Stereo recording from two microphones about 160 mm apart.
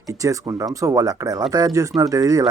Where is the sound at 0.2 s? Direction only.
20° right (ahead or behind).